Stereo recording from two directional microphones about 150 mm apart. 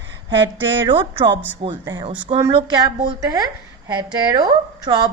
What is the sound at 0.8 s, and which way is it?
A man's voice, 30° right (ahead or behind).